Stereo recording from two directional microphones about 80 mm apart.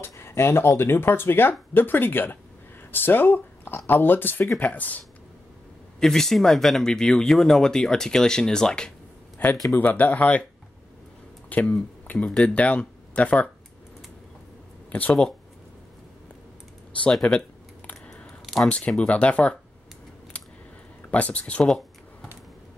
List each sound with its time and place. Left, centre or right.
0.0 s speech: left
5.9 s speech: centre
9.8 s speech: left
11.4 s speech: centre
14.9 s speech: left
17.1 s computer keyboard: centre
18.4 s a sound: centre
18.7 s speech: centre
21.1 s speech: centre
21.6 s a sound: centre